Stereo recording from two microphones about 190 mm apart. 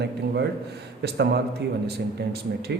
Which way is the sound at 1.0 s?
60° right (ahead or behind).